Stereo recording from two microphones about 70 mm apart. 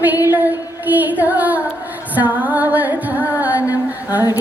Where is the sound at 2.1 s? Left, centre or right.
Right.